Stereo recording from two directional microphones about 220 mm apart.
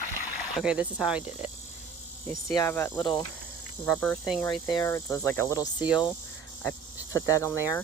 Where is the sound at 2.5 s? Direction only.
15° left (ahead or behind).